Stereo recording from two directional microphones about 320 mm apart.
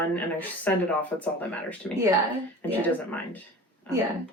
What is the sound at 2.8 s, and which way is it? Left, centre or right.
Speech, centre.